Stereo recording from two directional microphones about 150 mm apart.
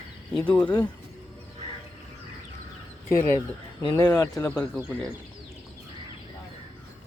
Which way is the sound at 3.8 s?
20° left (ahead or behind).